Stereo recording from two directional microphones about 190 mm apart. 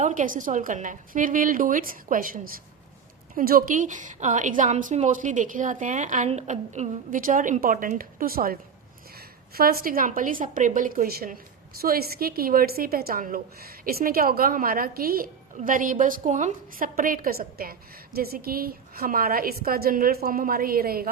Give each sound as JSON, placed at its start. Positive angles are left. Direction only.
{"t": 0.0, "sound": "a woman's voice", "side_deg": -45}